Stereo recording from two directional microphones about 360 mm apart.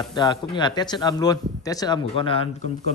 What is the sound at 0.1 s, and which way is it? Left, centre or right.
Speech, centre.